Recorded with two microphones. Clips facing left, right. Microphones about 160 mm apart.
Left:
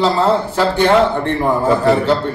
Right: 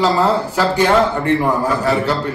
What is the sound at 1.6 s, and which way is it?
Speech, 20° left (ahead or behind).